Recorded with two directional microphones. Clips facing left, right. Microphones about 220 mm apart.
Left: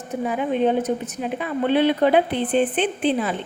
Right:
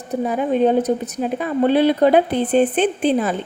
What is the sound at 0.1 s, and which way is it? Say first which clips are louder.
A woman's voice: right 4 dB; 40° right (ahead or behind).